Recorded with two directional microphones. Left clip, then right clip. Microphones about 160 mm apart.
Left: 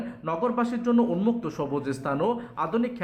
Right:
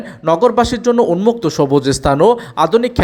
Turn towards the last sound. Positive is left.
turn(degrees=-35)  # may be behind; listen again after turning